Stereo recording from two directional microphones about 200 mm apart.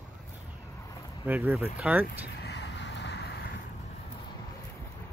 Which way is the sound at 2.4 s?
60° left (ahead or behind).